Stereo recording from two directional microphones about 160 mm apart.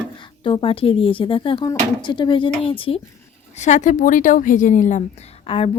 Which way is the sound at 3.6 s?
50° left (ahead or behind).